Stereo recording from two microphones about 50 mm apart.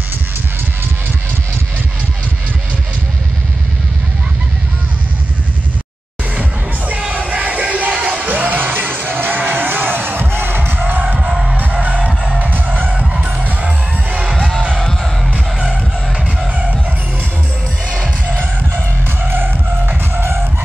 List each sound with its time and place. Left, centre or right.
7.1 s music: right
11.1 s music: centre
11.8 s music: right
12.4 s music: right
12.9 s music: centre
14.3 s music: centre
17.9 s music: centre
19.2 s music: right